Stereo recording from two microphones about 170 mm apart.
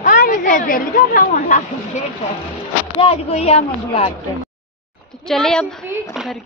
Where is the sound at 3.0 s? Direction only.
35° left (ahead or behind).